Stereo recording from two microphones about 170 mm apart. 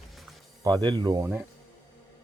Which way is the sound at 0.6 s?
25° right (ahead or behind).